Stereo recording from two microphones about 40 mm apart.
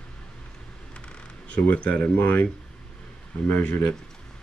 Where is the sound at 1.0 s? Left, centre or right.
Left.